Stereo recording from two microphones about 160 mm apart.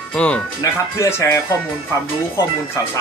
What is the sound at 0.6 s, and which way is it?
Speech, 20° left (ahead or behind).